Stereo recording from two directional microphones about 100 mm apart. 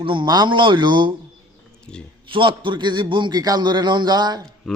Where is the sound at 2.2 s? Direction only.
55° right (ahead or behind).